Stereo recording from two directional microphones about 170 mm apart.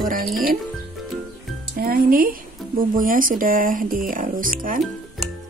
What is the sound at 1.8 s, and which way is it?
Speech, 60° right (ahead or behind).